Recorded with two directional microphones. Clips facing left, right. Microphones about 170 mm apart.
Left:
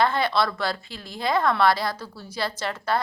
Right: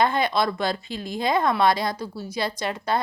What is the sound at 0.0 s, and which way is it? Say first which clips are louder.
A woman's voice: right 1 dB; 15° right (ahead or behind).